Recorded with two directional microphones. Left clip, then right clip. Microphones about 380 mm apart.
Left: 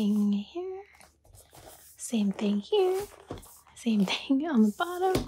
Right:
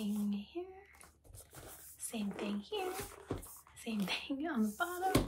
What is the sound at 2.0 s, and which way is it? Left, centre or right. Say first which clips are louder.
Speech: left 10 dB; centre.